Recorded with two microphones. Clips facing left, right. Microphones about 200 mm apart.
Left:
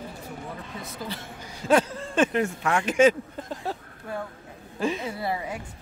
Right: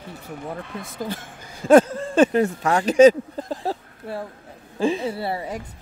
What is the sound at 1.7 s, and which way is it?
A woman's voice, 45° right (ahead or behind).